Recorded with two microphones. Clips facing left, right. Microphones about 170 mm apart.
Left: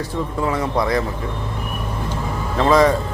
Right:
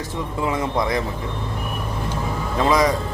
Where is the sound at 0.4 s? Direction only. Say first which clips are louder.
Left 1 dB; 20° right (ahead or behind).